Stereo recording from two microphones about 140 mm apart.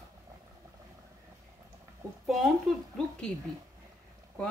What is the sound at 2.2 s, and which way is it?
Speech, centre (ahead or behind).